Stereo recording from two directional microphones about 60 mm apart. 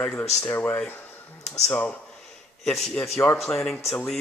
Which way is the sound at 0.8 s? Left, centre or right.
Left.